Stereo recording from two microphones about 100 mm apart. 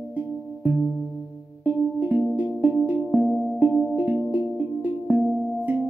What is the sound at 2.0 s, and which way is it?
Music, 20° right (ahead or behind).